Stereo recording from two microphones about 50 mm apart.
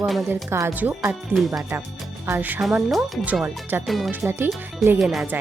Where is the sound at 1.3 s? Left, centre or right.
Right.